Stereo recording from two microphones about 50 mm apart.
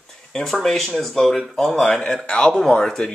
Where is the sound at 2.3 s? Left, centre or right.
Left.